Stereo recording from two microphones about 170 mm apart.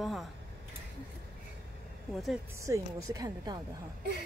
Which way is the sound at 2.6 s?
20° right (ahead or behind).